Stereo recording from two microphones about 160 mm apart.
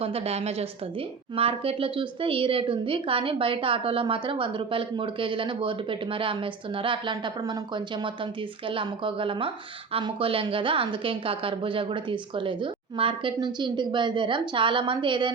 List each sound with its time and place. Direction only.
0.0 s a woman's voice: 40° right (ahead or behind)